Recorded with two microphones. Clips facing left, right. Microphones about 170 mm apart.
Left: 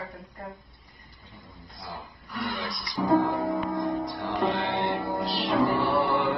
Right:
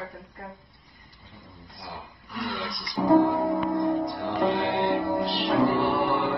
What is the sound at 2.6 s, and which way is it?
Music, 20° right (ahead or behind).